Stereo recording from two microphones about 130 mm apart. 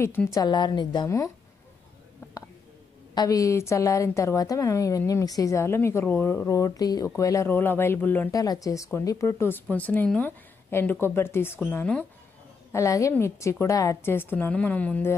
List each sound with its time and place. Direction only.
0.0 s a woman's voice: 20° left (ahead or behind)
0.4 s a woman's voice: 35° left (ahead or behind)
3.2 s a woman's voice: 25° left (ahead or behind)
8.3 s a woman's voice: 25° left (ahead or behind); by 12.1 s 10° left (ahead or behind)
12.7 s a woman's voice: 25° left (ahead or behind)